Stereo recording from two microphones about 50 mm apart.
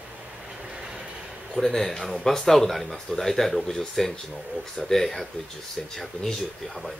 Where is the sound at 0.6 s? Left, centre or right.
Centre.